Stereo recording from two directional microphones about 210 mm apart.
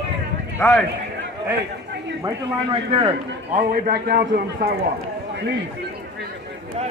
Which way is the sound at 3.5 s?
45° right (ahead or behind).